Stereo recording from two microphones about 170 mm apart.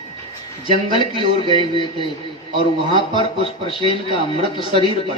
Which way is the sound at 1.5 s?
30° left (ahead or behind).